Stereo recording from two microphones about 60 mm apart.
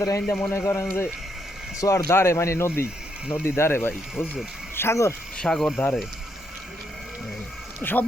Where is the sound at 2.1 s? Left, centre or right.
Left.